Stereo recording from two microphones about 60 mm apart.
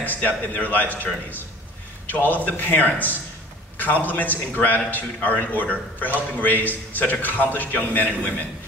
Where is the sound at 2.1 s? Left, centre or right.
Left.